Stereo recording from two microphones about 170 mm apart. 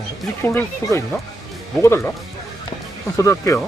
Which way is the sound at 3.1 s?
20° left (ahead or behind).